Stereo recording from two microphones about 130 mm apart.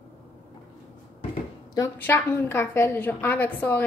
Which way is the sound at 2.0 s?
15° left (ahead or behind).